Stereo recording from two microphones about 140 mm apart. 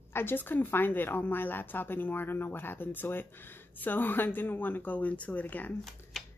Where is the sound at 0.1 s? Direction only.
15° left (ahead or behind).